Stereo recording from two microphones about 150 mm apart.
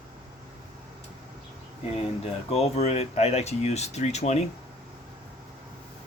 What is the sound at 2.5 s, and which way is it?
Speech, 45° left (ahead or behind).